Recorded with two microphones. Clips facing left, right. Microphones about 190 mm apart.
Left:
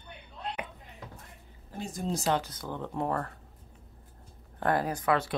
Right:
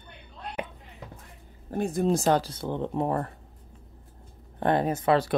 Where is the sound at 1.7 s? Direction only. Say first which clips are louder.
Right 9 dB; 60° right (ahead or behind).